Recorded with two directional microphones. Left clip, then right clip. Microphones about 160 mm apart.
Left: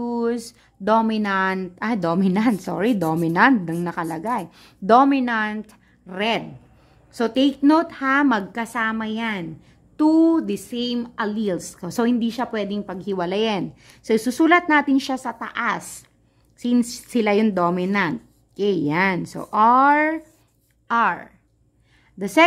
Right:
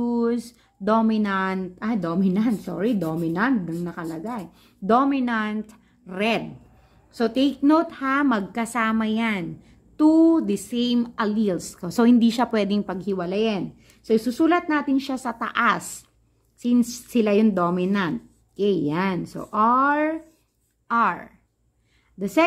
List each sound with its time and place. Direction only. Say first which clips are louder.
0.0 s a woman's voice: even; 15° left (ahead or behind); by 13.0 s 10° right (ahead or behind)
13.2 s speech: left 4 dB; 20° left (ahead or behind)
15.1 s a woman's voice: right 2 dB; centre (ahead or behind)
16.5 s a woman's voice: left 1 dB; 15° left (ahead or behind)